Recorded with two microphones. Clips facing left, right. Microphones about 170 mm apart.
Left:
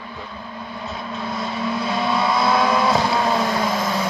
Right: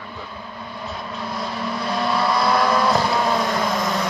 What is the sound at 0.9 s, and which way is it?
Vehicle, centre (ahead or behind).